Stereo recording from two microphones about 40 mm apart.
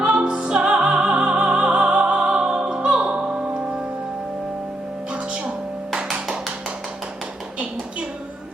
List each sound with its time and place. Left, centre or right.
0.0 s music: right
6.1 s tap: centre